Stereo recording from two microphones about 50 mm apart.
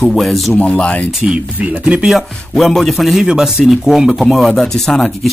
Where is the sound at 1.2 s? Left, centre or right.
Right.